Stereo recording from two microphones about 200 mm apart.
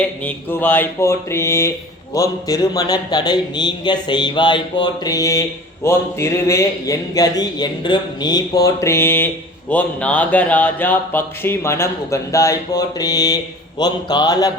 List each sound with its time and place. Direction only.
0.3 s a man's voice: 10° left (ahead or behind)